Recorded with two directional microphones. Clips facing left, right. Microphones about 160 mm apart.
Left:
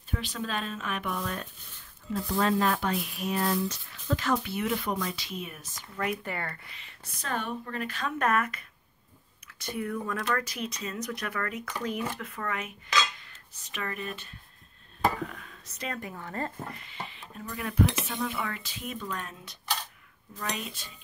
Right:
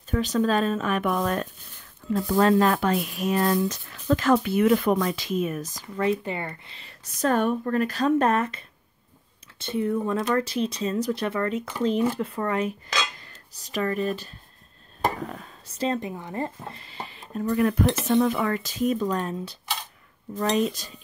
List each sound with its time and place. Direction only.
0.1 s speech: 45° right (ahead or behind)
1.1 s speech: 75° right (ahead or behind)
2.3 s speech: 60° right (ahead or behind)
3.2 s speech: 90° right
4.2 s speech: 60° right (ahead or behind); by 6.7 s 20° right (ahead or behind)
6.7 s speech: 40° right (ahead or behind)
12.1 s cutlery: 30° right (ahead or behind)
15.0 s speech: 35° right (ahead or behind); by 16.7 s 15° right (ahead or behind)
16.7 s music: 35° right (ahead or behind)
17.5 s speech: 50° right (ahead or behind)